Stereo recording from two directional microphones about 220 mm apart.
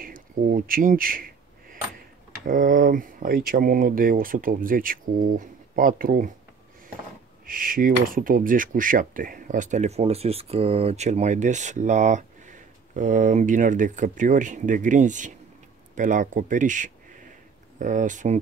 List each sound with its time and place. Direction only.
0.0 s a sound: 40° right (ahead or behind)
2.4 s speech: 35° right (ahead or behind)
7.4 s speech: 40° right (ahead or behind)